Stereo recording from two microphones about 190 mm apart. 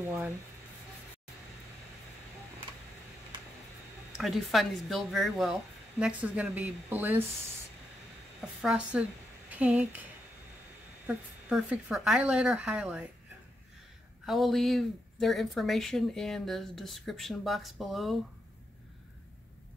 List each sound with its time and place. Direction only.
3.3 s a sound: 25° right (ahead or behind)
4.2 s speech: centre (ahead or behind)
8.6 s speech: 5° right (ahead or behind)
11.1 s speech: 5° right (ahead or behind)
14.2 s speech: centre (ahead or behind)